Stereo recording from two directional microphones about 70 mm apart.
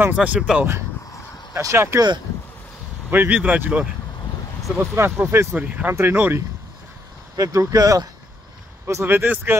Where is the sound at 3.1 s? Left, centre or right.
Right.